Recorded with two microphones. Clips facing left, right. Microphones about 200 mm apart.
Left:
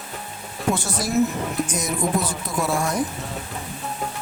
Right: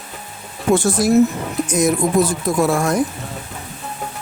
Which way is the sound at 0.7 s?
50° right (ahead or behind).